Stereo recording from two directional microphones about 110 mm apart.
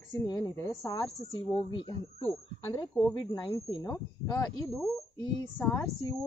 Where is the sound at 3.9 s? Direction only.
30° left (ahead or behind).